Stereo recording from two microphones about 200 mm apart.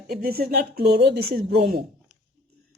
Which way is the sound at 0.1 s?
50° right (ahead or behind).